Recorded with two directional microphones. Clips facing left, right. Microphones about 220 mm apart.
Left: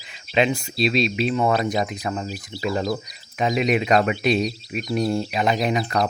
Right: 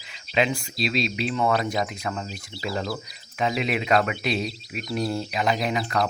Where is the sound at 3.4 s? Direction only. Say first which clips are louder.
Left 5 dB; 20° left (ahead or behind).